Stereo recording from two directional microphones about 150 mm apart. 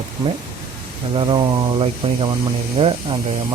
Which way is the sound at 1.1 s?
35° right (ahead or behind).